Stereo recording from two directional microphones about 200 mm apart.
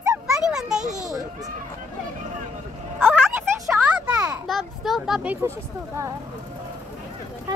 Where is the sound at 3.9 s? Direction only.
5° right (ahead or behind).